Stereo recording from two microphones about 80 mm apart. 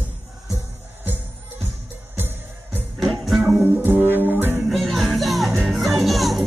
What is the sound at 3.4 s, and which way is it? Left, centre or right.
Music, right.